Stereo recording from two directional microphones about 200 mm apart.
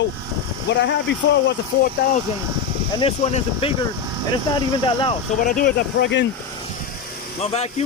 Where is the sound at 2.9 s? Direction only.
30° left (ahead or behind).